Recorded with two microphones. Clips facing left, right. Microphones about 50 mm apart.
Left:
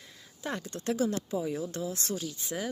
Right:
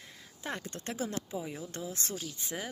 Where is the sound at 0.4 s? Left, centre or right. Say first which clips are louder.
Left 5 dB; right.